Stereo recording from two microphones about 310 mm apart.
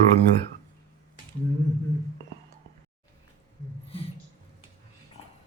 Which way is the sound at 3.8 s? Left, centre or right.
Centre.